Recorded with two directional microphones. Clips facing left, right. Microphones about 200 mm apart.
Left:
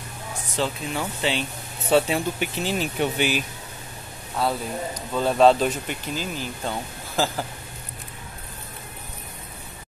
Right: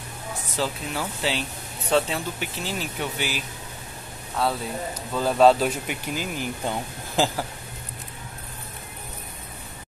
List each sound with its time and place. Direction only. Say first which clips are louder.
0.6 s speech: left 2 dB; centre (ahead or behind); by 3.4 s 20° left (ahead or behind)
4.4 s speech: left 1 dB; centre (ahead or behind)